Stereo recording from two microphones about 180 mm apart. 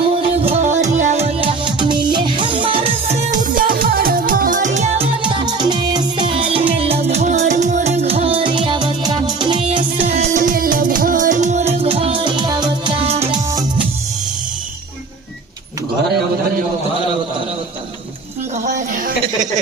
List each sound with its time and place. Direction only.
0.1 s music: 30° right (ahead or behind)
10.2 s music: 45° right (ahead or behind); by 13.2 s 30° right (ahead or behind)
18.6 s a sound: 45° right (ahead or behind)